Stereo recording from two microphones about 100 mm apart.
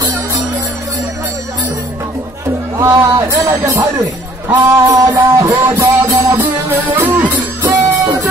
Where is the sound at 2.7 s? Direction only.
30° right (ahead or behind).